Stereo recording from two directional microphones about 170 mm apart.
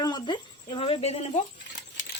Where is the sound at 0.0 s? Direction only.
25° left (ahead or behind).